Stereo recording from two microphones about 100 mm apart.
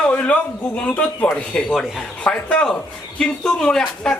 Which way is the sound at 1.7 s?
5° right (ahead or behind).